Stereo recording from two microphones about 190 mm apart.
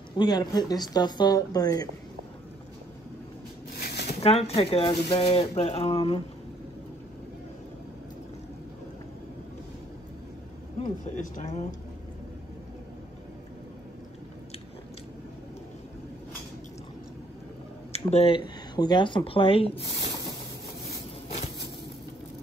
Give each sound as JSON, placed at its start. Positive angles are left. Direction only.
{"t": 0.2, "sound": "speech", "side_deg": 20}
{"t": 3.7, "sound": "a sound", "side_deg": 55}
{"t": 4.2, "sound": "speech", "side_deg": 30}
{"t": 10.8, "sound": "speech", "side_deg": 40}
{"t": 17.9, "sound": "speech", "side_deg": 30}